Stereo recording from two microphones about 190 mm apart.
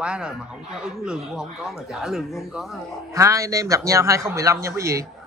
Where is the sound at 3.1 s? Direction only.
15° right (ahead or behind).